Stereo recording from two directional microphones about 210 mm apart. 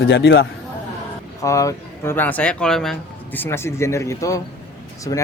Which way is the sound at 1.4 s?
15° left (ahead or behind).